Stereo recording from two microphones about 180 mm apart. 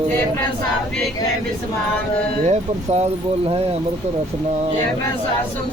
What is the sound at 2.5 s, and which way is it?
Speech, 35° right (ahead or behind).